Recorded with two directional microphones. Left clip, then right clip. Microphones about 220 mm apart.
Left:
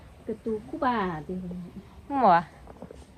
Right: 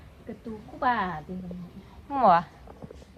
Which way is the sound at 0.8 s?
30° right (ahead or behind).